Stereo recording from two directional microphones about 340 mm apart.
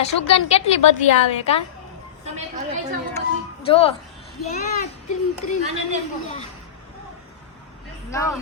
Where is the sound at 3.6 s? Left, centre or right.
Centre.